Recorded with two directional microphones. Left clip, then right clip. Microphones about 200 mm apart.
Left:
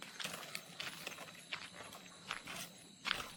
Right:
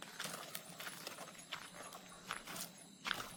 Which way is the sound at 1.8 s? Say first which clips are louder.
Even; 5° right (ahead or behind).